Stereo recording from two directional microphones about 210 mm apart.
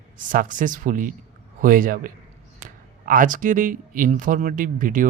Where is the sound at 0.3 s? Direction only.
40° right (ahead or behind).